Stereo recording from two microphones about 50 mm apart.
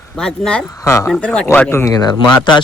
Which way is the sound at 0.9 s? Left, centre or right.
Left.